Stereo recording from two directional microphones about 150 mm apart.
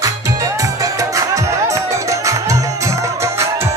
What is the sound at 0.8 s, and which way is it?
Music, 20° right (ahead or behind).